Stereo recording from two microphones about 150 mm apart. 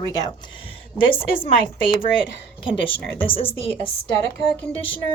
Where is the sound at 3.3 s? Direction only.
40° left (ahead or behind).